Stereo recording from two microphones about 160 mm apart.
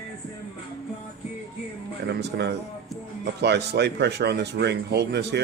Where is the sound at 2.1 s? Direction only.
90° right.